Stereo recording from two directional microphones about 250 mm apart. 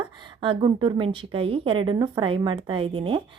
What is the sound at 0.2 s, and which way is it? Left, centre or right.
A woman's voice, centre.